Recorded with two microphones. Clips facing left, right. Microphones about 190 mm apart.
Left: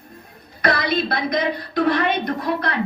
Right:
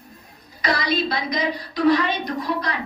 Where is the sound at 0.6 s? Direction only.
55° left (ahead or behind).